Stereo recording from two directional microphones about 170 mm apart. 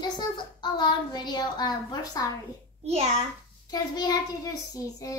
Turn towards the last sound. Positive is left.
turn(degrees=20)  # may be behind; listen again after turning